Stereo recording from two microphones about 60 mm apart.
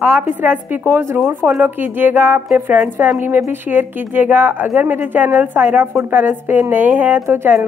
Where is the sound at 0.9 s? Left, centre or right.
Right.